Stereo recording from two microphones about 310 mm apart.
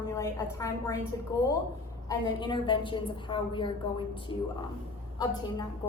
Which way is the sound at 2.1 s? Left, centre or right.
Centre.